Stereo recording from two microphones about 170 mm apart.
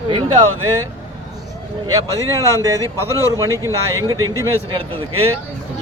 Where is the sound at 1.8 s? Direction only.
20° right (ahead or behind).